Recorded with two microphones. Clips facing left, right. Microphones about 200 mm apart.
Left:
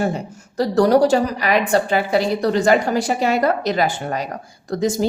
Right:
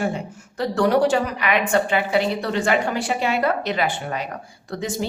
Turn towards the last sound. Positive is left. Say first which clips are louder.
# left 7 dB
turn(degrees=40)  # may be behind; listen again after turning